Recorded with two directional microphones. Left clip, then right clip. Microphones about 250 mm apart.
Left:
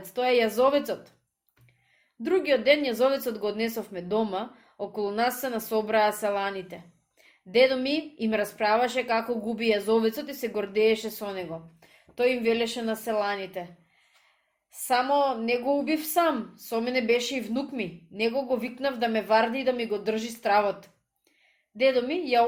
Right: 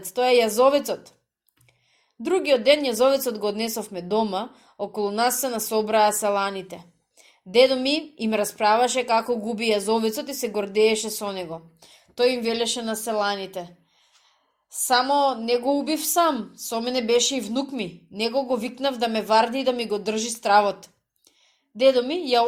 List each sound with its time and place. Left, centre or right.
0.0 s a woman's voice: centre
2.2 s a woman's voice: centre
14.7 s a woman's voice: right